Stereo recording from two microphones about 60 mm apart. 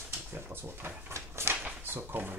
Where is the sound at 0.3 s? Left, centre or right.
Right.